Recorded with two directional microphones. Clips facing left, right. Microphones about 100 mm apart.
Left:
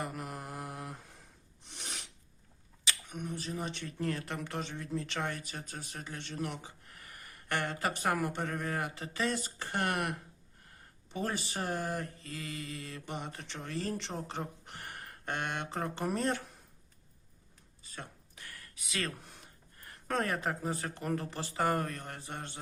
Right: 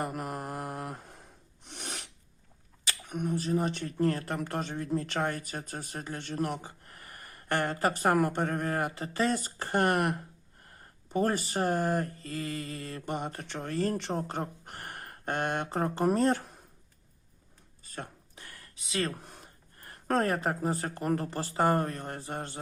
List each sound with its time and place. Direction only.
0.0 s mantra: 50° right (ahead or behind)
1.6 s filing: 60° right (ahead or behind)
2.8 s speech: 50° right (ahead or behind)
17.9 s a sound: 40° right (ahead or behind)
18.4 s a sound: 25° right (ahead or behind)
19.8 s speech: 40° right (ahead or behind)